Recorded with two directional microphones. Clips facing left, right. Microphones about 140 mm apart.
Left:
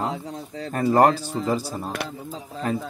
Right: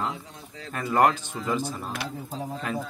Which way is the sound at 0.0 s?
35° left (ahead or behind).